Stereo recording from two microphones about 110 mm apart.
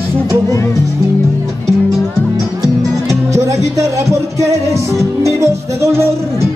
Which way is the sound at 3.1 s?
25° right (ahead or behind).